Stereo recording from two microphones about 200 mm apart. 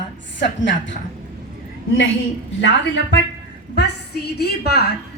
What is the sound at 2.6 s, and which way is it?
A woman's voice, 60° left (ahead or behind).